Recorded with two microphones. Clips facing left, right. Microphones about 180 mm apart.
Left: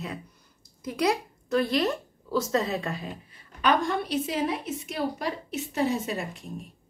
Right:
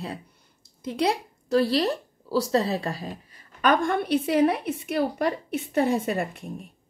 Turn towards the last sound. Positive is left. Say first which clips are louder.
# right 5 dB
turn(degrees=-55)  # may be behind; listen again after turning